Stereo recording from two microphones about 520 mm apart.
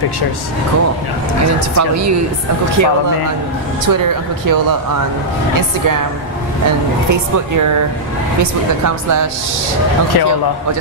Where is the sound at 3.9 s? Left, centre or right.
Right.